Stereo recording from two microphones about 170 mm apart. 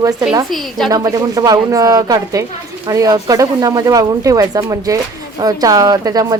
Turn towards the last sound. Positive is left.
turn(degrees=-20)  # may be behind; listen again after turning